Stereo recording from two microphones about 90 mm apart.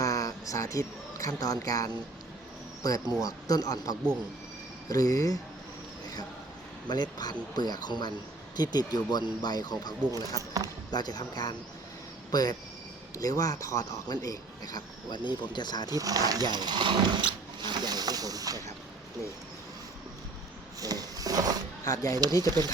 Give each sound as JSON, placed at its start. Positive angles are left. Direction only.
{"t": 0.0, "sound": "speech", "side_deg": 40}
{"t": 6.8, "sound": "speech", "side_deg": 50}
{"t": 10.9, "sound": "speech", "side_deg": 50}
{"t": 16.0, "sound": "speech", "side_deg": -40}
{"t": 20.8, "sound": "a sound", "side_deg": -45}
{"t": 21.8, "sound": "speech", "side_deg": 40}
{"t": 22.4, "sound": "speech", "side_deg": -50}